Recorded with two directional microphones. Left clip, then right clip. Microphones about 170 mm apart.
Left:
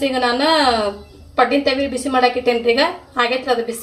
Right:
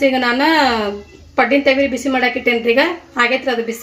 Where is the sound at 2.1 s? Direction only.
55° right (ahead or behind).